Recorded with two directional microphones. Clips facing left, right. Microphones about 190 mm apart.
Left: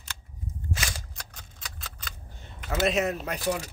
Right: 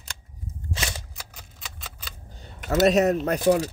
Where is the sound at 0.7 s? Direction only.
30° right (ahead or behind).